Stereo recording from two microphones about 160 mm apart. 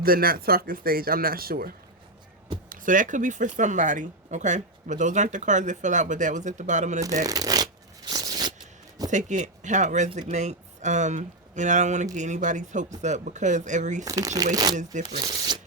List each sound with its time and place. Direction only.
0.0 s speech: 65° right (ahead or behind)
2.6 s speech: 55° right (ahead or behind)
7.3 s shuffling cards: 25° right (ahead or behind)
9.0 s speech: 50° right (ahead or behind)
14.0 s speech: 20° right (ahead or behind)
15.2 s shuffling cards: 25° right (ahead or behind)